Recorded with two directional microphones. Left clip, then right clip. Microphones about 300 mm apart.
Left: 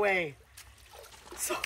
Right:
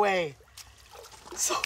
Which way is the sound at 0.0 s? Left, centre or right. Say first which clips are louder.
Right 3 dB; centre.